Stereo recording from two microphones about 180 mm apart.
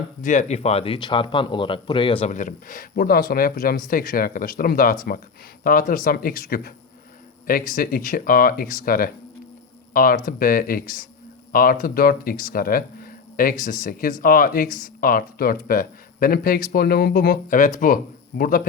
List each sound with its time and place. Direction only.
0.2 s speech: 40° left (ahead or behind)
2.3 s speech: 45° left (ahead or behind)